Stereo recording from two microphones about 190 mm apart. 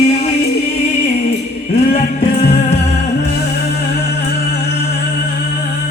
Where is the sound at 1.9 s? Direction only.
35° left (ahead or behind).